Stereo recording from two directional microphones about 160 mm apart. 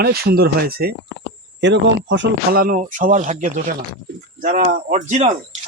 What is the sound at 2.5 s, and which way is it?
Speech, 65° right (ahead or behind).